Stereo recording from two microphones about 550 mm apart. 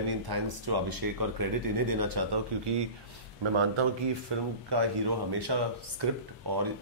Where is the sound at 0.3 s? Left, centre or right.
Right.